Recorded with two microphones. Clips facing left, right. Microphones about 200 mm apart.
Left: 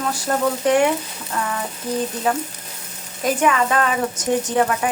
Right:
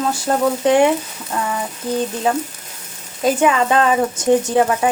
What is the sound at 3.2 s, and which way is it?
Speech, 25° right (ahead or behind).